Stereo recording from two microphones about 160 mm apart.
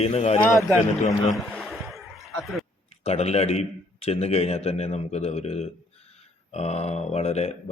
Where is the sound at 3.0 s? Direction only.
40° left (ahead or behind).